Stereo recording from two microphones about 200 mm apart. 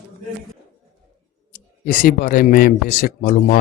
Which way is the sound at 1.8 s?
40° left (ahead or behind).